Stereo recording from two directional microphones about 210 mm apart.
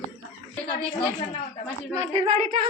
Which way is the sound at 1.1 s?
30° left (ahead or behind).